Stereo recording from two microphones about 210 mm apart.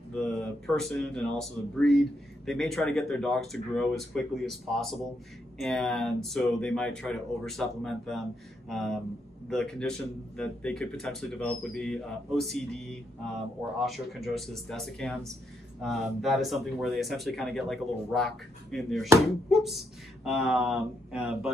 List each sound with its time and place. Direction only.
0.1 s speech: 5° left (ahead or behind)